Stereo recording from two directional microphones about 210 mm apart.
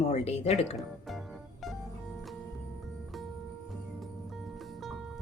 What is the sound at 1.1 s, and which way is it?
Music, centre (ahead or behind).